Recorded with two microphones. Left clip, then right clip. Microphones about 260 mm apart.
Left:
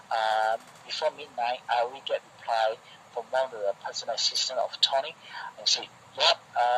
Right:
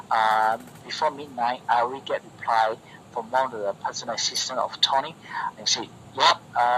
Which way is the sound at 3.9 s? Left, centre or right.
Centre.